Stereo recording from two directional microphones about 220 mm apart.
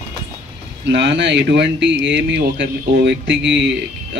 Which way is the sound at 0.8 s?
50° right (ahead or behind).